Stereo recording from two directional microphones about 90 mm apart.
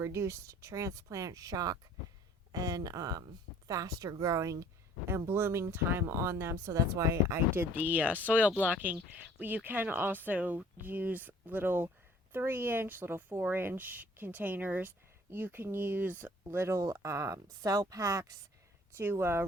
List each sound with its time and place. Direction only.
0.0 s a woman's voice: 30° right (ahead or behind)